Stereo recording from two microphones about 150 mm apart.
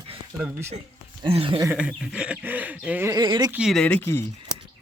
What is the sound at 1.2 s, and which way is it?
Speech, 35° right (ahead or behind).